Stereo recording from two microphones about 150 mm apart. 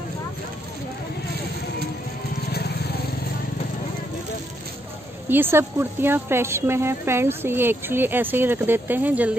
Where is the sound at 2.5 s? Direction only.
90° left.